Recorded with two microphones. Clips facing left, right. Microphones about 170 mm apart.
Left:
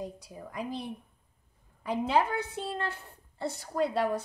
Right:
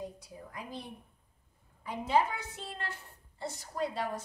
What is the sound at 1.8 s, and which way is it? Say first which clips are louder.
A woman's voice: left 2 dB; 75° left (ahead or behind).